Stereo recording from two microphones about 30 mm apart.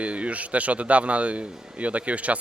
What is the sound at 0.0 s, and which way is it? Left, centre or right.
Speech, right.